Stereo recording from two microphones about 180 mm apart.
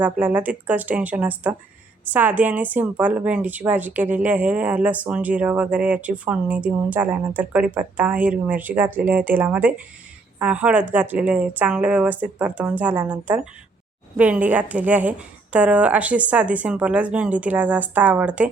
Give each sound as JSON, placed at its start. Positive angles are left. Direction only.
{"t": 0.0, "sound": "a woman's voice", "side_deg": -10}